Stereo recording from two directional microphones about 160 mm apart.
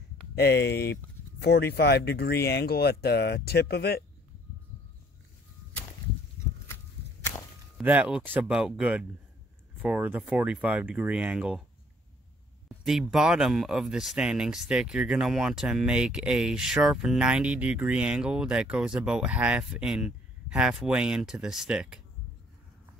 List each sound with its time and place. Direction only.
0.4 s speech: 90° left
7.8 s speech: 10° right (ahead or behind)
12.6 s speech: centre (ahead or behind)